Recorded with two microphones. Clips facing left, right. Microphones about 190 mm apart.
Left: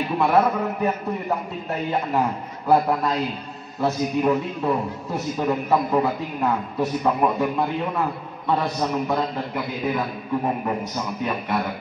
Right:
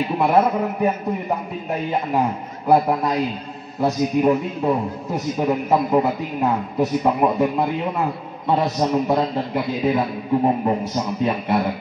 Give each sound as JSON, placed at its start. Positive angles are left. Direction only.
{"t": 0.2, "sound": "a man's voice", "side_deg": -15}